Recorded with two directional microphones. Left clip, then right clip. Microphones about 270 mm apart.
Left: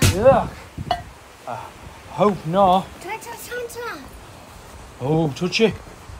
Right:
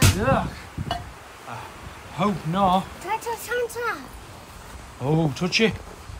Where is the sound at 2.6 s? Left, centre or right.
Centre.